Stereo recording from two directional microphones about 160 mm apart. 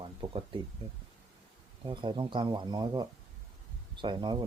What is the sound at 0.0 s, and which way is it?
Speech, 35° right (ahead or behind).